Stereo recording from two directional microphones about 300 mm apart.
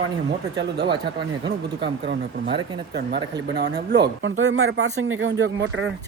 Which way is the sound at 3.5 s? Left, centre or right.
Right.